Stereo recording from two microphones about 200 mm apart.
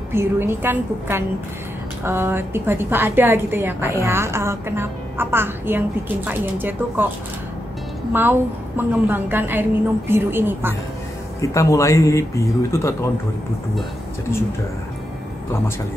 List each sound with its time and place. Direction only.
0.1 s a woman's voice: 10° right (ahead or behind)
8.1 s a woman's voice: 10° right (ahead or behind)
11.4 s speech: 15° left (ahead or behind)